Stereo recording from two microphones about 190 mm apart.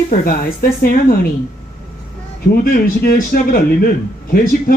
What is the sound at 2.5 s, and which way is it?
Speech, 50° left (ahead or behind).